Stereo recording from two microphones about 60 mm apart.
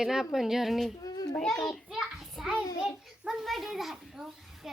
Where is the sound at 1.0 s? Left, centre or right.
Left.